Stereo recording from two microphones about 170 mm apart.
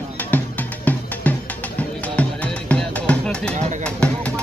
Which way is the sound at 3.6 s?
45° right (ahead or behind).